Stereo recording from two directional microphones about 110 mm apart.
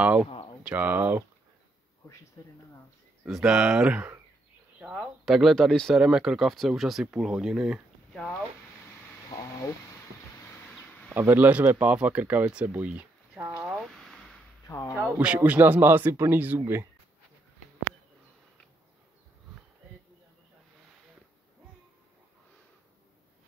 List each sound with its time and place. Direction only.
0.0 s speech: 15° right (ahead or behind)
2.4 s speech: 30° left (ahead or behind)
3.3 s speech: 5° right (ahead or behind)
4.7 s a sound: 10° right (ahead or behind)
5.2 s speech: centre (ahead or behind)
8.1 s speech: 5° left (ahead or behind)
9.4 s a sound: 30° left (ahead or behind)
11.1 s speech: 15° right (ahead or behind)
13.7 s a sound: 5° right (ahead or behind)
14.7 s speech: 30° left (ahead or behind)
15.0 s speech: 10° right (ahead or behind)